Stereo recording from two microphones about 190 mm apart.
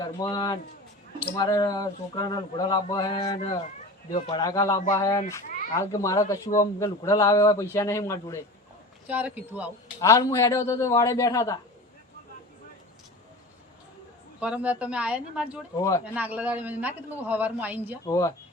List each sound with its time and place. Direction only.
0.0 s speech: 20° left (ahead or behind)
9.0 s a man's voice: 10° right (ahead or behind)
10.0 s speech: 15° left (ahead or behind)
14.3 s speech: 5° right (ahead or behind)
15.7 s speech: 15° left (ahead or behind)
16.1 s a man's voice: 10° right (ahead or behind)
18.0 s speech: 20° left (ahead or behind)